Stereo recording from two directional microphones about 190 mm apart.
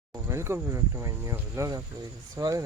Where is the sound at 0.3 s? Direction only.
15° right (ahead or behind).